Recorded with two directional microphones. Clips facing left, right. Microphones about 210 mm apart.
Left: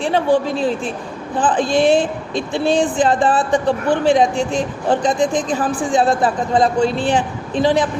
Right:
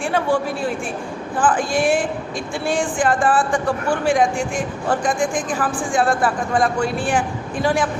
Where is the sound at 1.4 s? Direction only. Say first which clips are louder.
Left 3 dB; 20° left (ahead or behind).